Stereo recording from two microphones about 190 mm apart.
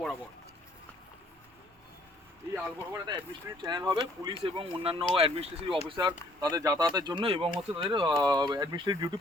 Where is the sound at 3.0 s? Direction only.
20° right (ahead or behind).